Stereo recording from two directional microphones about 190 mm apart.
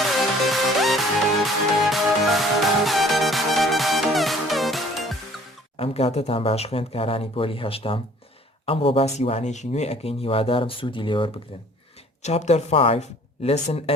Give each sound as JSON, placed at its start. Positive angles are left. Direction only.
{"t": 0.0, "sound": "music", "side_deg": 0}
{"t": 5.7, "sound": "speech", "side_deg": 30}